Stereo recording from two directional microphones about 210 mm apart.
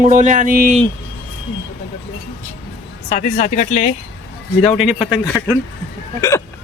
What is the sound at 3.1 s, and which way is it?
Speech, 35° left (ahead or behind).